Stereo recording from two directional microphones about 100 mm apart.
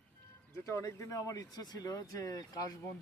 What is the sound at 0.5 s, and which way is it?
Speech, 30° left (ahead or behind).